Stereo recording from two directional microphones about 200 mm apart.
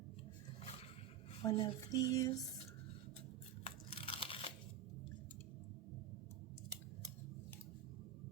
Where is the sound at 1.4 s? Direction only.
20° left (ahead or behind).